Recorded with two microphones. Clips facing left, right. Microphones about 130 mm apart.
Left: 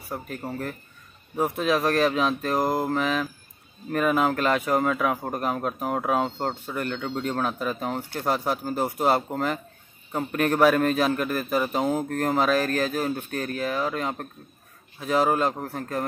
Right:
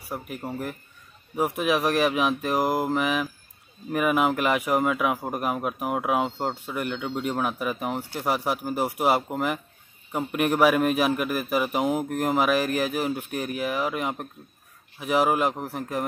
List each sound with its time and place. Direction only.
0.1 s speech: 10° right (ahead or behind)